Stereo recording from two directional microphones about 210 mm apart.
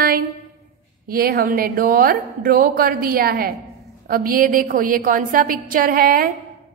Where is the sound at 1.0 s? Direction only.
45° right (ahead or behind).